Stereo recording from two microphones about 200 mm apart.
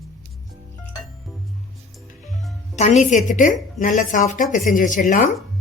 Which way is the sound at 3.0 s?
40° left (ahead or behind).